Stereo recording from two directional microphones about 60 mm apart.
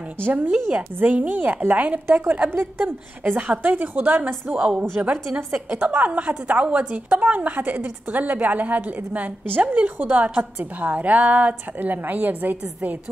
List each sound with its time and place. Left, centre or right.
0.2 s a woman's voice: right
4.6 s a woman's voice: centre; by 12.9 s right